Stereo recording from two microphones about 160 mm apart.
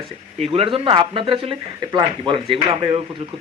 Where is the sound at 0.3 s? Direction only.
40° right (ahead or behind).